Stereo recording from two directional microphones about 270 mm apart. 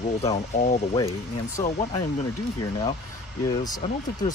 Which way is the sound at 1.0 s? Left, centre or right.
Centre.